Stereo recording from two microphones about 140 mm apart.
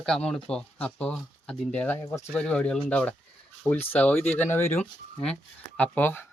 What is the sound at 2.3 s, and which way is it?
Speech, 10° left (ahead or behind).